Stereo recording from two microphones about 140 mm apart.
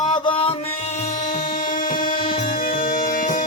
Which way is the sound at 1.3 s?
65° left (ahead or behind).